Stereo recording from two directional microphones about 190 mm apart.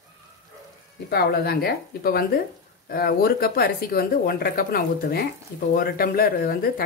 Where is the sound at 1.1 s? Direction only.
55° left (ahead or behind).